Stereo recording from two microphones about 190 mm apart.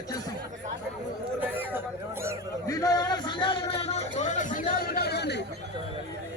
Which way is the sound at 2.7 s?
20° left (ahead or behind).